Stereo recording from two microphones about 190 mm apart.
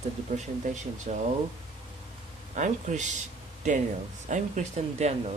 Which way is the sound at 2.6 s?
40° right (ahead or behind).